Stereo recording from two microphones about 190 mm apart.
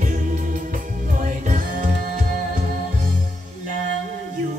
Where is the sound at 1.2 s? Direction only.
45° right (ahead or behind).